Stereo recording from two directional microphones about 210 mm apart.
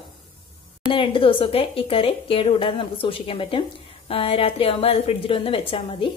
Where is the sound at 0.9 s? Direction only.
25° left (ahead or behind).